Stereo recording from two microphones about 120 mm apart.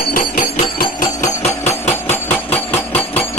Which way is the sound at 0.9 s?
80° left.